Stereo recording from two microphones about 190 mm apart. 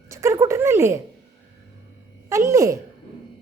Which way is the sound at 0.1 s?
15° right (ahead or behind).